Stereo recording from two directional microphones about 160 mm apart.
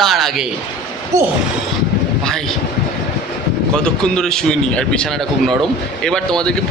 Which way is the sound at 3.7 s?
5° left (ahead or behind).